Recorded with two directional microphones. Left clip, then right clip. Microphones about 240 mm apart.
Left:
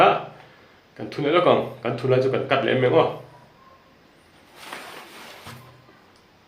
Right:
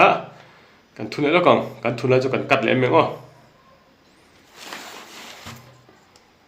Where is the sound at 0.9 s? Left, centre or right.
Right.